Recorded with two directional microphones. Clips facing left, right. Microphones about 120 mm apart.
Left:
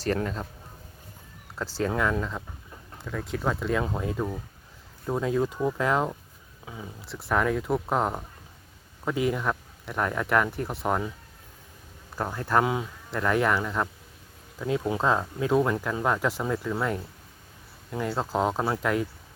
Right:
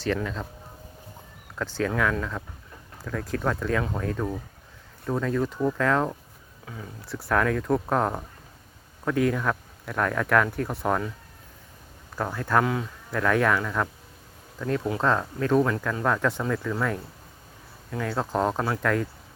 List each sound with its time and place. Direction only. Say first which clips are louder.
0.0 s speech: even; 40° left (ahead or behind)
1.5 s speech: right 2 dB; 35° left (ahead or behind)
3.0 s speech: right 2 dB; centre (ahead or behind); by 6.8 s 15° left (ahead or behind)
7.0 s speech: right 1 dB; centre (ahead or behind)
12.1 s speech: right 1 dB; 20° left (ahead or behind)
13.1 s speech: right 1 dB; 5° left (ahead or behind)